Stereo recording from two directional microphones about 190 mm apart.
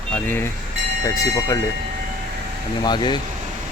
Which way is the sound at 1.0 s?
15° left (ahead or behind).